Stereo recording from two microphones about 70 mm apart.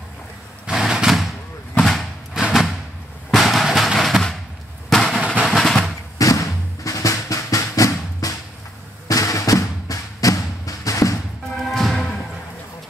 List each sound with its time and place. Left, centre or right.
0.7 s a sound: centre
2.4 s a sound: centre
4.8 s fireworks: centre
5.4 s drum roll: centre
6.1 s drum: left
9.0 s music: left
11.7 s music: centre